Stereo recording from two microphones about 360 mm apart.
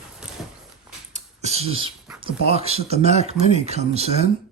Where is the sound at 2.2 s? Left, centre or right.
Centre.